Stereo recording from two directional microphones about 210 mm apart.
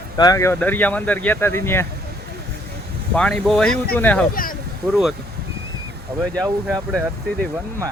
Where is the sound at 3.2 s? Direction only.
5° left (ahead or behind).